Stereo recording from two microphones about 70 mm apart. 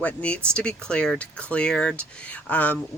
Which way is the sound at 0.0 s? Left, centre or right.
Centre.